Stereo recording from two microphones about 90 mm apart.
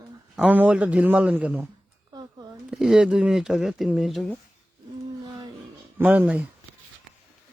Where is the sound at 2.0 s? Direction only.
50° right (ahead or behind).